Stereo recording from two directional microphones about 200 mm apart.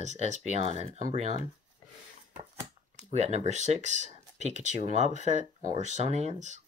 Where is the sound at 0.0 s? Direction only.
35° right (ahead or behind).